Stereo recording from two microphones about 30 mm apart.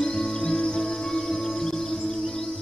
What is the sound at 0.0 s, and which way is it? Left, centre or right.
Music, left.